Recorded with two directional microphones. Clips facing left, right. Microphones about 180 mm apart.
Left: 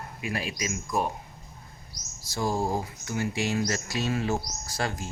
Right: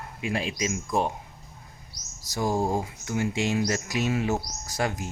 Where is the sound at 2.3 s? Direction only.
15° right (ahead or behind).